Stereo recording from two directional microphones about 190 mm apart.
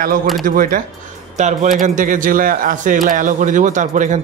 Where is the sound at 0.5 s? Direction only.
50° right (ahead or behind).